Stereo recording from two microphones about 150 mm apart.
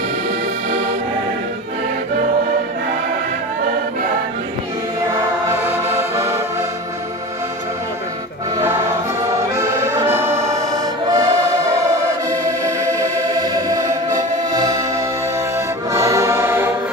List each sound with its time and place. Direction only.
5.1 s music: 15° right (ahead or behind)
9.6 s accordion: 20° right (ahead or behind)
11.1 s music: 25° right (ahead or behind)
15.9 s music: 20° right (ahead or behind)